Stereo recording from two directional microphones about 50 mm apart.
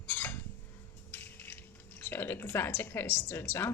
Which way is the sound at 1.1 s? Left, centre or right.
Left.